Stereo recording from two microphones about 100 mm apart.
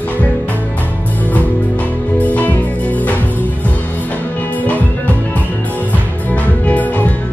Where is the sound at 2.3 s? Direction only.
15° left (ahead or behind).